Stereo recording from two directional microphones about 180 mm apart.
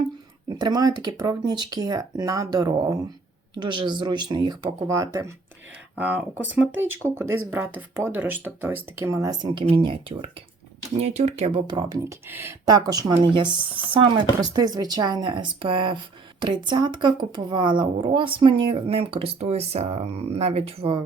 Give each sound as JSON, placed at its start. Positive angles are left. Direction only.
{"t": 0.6, "sound": "speech", "side_deg": -20}